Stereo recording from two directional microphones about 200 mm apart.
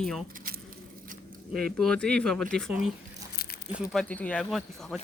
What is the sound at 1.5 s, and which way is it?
Speech, centre (ahead or behind).